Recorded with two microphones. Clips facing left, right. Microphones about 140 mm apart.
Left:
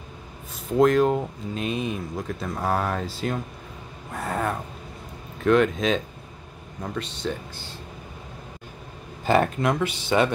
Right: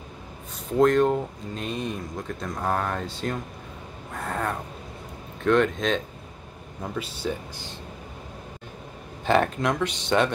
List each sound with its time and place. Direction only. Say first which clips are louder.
0.7 s speech: left 1 dB; centre (ahead or behind)
9.2 s speech: left 1 dB; 5° left (ahead or behind)